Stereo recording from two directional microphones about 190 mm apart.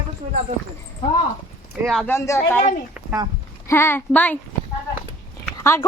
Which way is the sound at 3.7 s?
10° left (ahead or behind).